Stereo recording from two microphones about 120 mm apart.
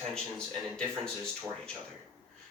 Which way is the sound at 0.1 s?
5° left (ahead or behind).